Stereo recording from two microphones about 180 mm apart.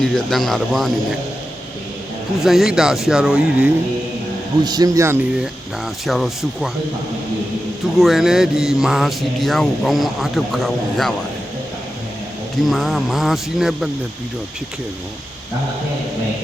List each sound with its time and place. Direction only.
0.0 s speech: centre (ahead or behind)
2.4 s speech: centre (ahead or behind)
4.6 s speech: 20° right (ahead or behind)
6.1 s speech: centre (ahead or behind)
7.9 s speech: centre (ahead or behind)
12.6 s speech: centre (ahead or behind)